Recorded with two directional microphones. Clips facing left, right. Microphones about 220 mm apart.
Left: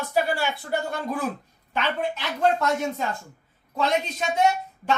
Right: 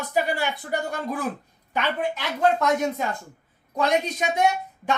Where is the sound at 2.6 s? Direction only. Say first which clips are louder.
Right 2 dB; 15° right (ahead or behind).